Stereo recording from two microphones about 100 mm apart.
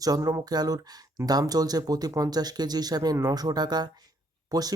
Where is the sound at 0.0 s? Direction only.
35° right (ahead or behind).